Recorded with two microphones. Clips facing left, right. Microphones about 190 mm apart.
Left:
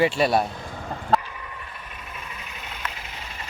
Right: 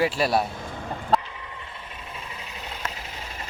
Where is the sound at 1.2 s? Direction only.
25° right (ahead or behind).